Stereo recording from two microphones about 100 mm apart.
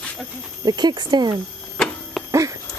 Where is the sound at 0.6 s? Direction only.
45° right (ahead or behind).